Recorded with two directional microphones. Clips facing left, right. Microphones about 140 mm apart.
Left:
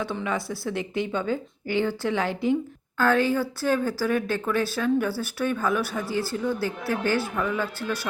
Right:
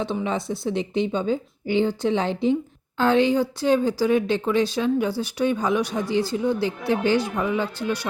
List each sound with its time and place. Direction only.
0.0 s speech: 20° right (ahead or behind)